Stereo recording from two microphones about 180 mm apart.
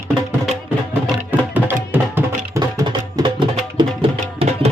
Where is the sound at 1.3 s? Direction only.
10° right (ahead or behind); by 4.6 s 35° right (ahead or behind).